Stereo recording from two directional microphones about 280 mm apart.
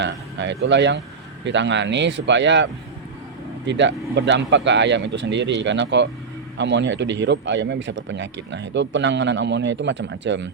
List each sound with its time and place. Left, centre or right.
0.0 s speech: right
3.7 s speech: right